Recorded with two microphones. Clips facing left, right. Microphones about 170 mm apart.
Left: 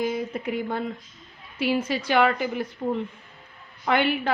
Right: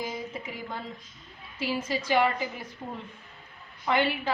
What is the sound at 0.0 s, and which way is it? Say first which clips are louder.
A woman's voice: left 8 dB; 60° left (ahead or behind).